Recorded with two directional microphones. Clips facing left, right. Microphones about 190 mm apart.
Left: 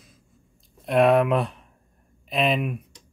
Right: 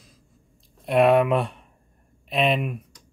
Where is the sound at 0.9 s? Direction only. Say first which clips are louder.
Right 1 dB; centre (ahead or behind).